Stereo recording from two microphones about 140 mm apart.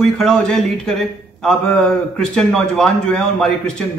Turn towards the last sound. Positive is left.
turn(degrees=5)  # may be behind; listen again after turning